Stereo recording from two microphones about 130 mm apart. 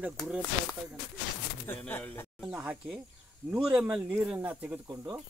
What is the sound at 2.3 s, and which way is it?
Speech, 10° right (ahead or behind).